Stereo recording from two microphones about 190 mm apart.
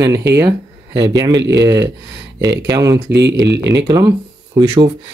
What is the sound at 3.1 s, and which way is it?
Speech, 65° right (ahead or behind).